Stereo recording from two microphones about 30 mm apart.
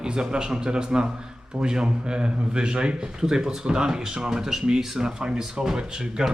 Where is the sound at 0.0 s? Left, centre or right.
Right.